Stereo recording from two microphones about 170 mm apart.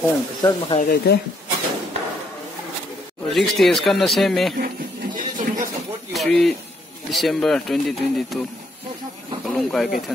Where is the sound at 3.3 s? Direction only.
Centre (ahead or behind).